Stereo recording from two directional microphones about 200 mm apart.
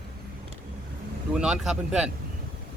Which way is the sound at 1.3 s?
5° right (ahead or behind).